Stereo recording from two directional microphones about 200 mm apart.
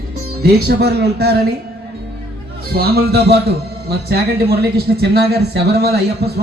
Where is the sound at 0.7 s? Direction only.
55° right (ahead or behind).